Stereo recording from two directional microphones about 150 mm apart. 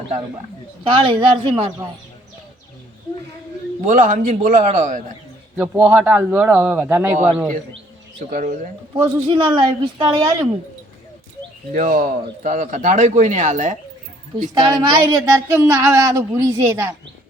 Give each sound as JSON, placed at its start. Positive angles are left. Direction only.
{"t": 0.9, "sound": "speech", "side_deg": -35}
{"t": 3.8, "sound": "speech", "side_deg": -60}
{"t": 5.5, "sound": "speech", "side_deg": -10}
{"t": 8.3, "sound": "speech", "side_deg": -55}
{"t": 9.0, "sound": "speech", "side_deg": -35}
{"t": 11.7, "sound": "speech", "side_deg": -65}
{"t": 14.6, "sound": "speech", "side_deg": -25}